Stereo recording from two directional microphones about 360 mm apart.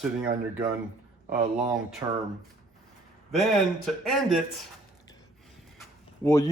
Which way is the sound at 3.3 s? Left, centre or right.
Centre.